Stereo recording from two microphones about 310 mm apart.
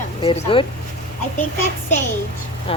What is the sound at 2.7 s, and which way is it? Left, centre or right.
Speech, centre.